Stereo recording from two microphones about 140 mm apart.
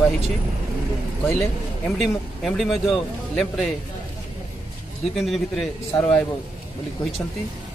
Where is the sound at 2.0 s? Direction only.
Centre (ahead or behind).